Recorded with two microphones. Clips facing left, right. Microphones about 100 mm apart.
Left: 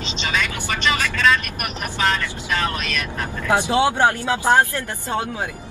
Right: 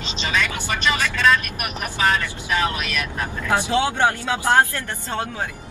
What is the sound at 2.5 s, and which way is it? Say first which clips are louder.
Speech: right 1 dB; 15° right (ahead or behind).